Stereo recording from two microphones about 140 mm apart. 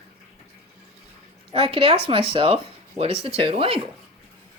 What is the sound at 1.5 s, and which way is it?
Speech, 40° right (ahead or behind).